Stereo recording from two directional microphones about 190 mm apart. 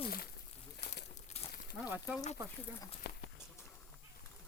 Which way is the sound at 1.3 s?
35° left (ahead or behind).